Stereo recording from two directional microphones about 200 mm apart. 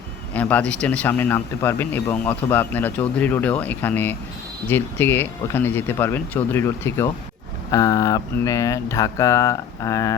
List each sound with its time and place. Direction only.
0.3 s speech: 5° left (ahead or behind)